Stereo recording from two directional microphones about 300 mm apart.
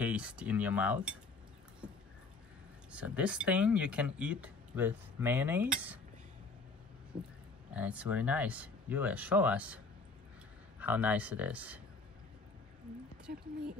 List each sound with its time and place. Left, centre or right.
0.0 s speech: centre
2.9 s speech: centre
7.7 s speech: centre
10.8 s speech: centre
13.3 s speech: right